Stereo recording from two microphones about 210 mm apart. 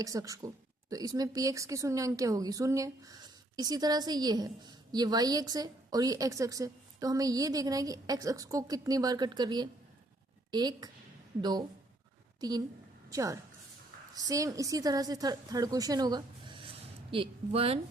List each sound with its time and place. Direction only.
0.0 s a woman's voice: 15° right (ahead or behind)